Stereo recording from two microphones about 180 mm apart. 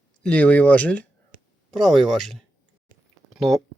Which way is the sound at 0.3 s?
10° left (ahead or behind).